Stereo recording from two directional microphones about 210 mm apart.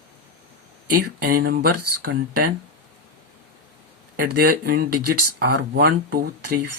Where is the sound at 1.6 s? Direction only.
90° right.